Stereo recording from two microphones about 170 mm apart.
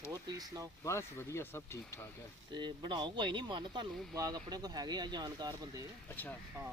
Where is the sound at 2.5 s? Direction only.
25° right (ahead or behind).